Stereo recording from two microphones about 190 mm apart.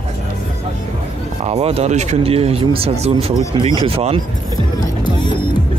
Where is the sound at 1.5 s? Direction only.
30° right (ahead or behind).